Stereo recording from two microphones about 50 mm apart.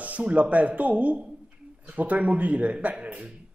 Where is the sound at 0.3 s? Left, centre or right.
Right.